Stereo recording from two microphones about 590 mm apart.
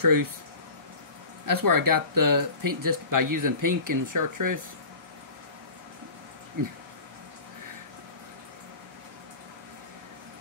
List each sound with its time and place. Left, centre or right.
0.0 s speech: right
1.4 s speech: right
6.6 s speech: right